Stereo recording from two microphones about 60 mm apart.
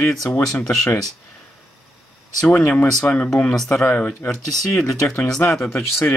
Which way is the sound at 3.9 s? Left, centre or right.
Left.